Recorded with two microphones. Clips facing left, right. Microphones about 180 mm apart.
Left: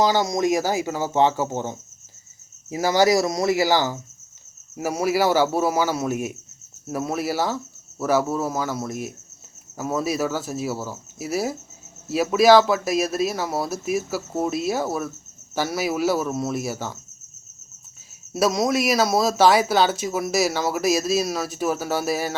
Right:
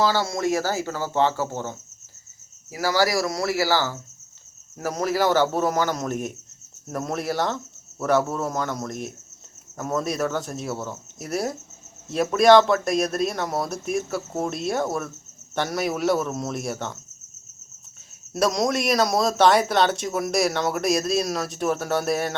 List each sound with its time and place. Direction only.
0.0 s speech: 15° left (ahead or behind)
18.3 s speech: 5° left (ahead or behind)